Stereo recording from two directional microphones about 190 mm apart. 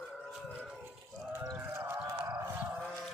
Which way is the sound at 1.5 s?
10° right (ahead or behind).